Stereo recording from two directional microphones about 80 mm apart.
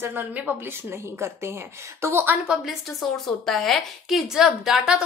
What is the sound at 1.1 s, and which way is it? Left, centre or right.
A woman's voice, right.